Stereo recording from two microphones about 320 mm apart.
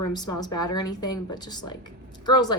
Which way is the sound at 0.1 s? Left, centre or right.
Centre.